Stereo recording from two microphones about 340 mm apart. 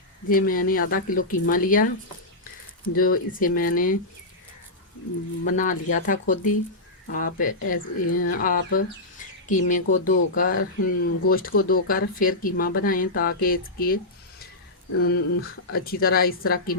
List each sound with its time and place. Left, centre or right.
0.3 s speech: left
2.9 s speech: left
5.5 s speech: left